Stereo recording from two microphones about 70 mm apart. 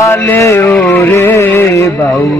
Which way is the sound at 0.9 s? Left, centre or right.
Left.